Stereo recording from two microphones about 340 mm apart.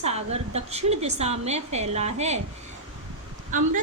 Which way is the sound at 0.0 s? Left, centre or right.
Centre.